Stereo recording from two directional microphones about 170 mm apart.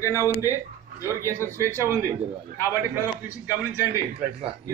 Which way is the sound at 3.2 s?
10° right (ahead or behind).